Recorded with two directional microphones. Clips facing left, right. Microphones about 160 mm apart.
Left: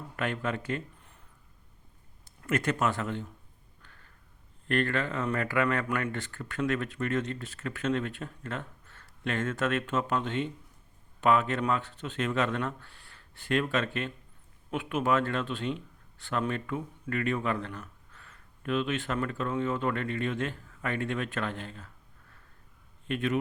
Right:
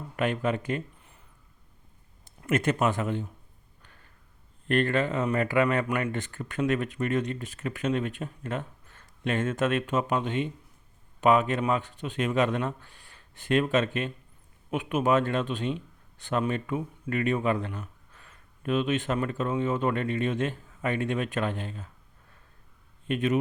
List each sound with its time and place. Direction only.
0.2 s speech: 20° right (ahead or behind)
2.2 s speech: 20° right (ahead or behind)
4.7 s a man's voice: 20° right (ahead or behind)
23.0 s a man's voice: 20° right (ahead or behind)